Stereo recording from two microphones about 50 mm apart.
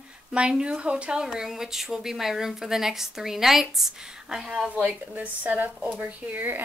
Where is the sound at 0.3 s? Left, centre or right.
Centre.